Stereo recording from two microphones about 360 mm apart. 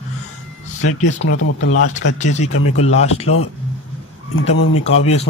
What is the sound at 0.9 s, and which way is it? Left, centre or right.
Speech, left.